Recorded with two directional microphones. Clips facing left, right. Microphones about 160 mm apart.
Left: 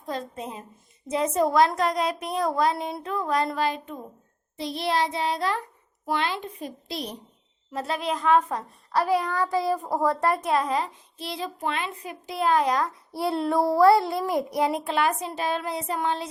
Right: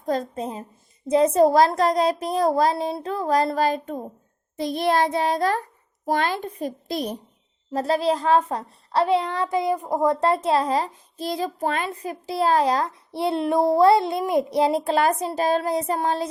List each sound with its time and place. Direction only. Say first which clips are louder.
0.0 s a woman's voice: right 7 dB; 40° right (ahead or behind)